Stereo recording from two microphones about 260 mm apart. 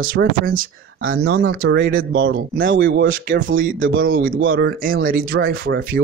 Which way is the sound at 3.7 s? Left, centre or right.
Right.